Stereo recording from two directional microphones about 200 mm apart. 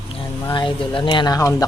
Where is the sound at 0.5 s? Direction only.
25° left (ahead or behind).